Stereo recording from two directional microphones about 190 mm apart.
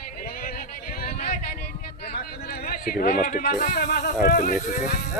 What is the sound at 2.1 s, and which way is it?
Speech, 55° left (ahead or behind).